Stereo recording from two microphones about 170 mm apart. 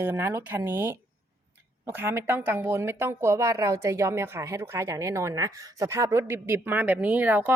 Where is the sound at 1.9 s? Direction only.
15° right (ahead or behind).